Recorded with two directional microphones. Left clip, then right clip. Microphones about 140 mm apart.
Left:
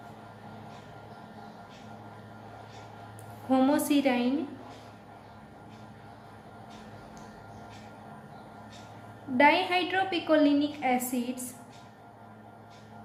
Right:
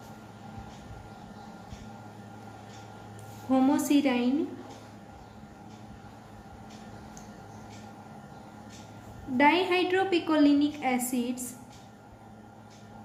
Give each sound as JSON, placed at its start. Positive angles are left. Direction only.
{"t": 3.5, "sound": "a woman's voice", "side_deg": 50}
{"t": 9.4, "sound": "a woman's voice", "side_deg": 40}